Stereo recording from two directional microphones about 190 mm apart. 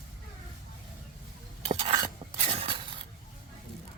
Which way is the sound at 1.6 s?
30° right (ahead or behind).